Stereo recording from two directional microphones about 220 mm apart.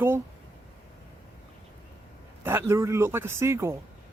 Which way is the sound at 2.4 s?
10° right (ahead or behind).